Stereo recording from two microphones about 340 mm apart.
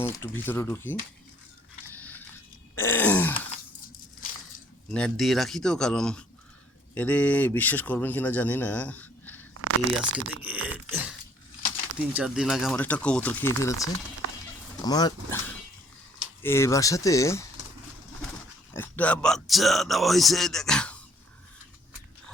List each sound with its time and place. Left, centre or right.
0.0 s speech: centre
1.9 s biting: centre
2.7 s groan: centre
4.9 s speech: centre
9.6 s a sound: right
10.2 s speech: right
10.4 s a sound: centre
12.1 s speech: centre
16.4 s speech: centre
18.7 s speech: centre